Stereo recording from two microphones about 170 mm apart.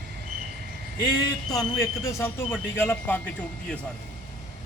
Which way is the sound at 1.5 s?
20° left (ahead or behind).